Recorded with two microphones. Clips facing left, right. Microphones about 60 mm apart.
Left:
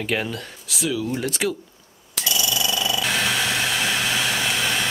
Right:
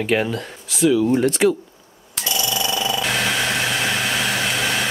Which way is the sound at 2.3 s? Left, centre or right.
Centre.